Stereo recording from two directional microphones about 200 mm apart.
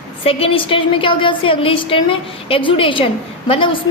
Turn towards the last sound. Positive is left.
turn(degrees=25)  # may be behind; listen again after turning